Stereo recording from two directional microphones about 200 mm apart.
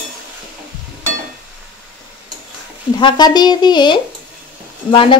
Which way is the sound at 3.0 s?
20° left (ahead or behind).